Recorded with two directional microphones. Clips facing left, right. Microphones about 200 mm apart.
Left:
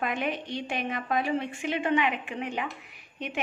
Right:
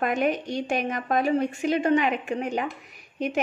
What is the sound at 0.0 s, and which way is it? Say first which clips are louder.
A woman's voice: right 6 dB; 45° right (ahead or behind).